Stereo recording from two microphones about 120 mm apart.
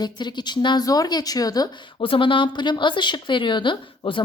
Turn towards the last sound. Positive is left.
turn(degrees=45)  # may be behind; listen again after turning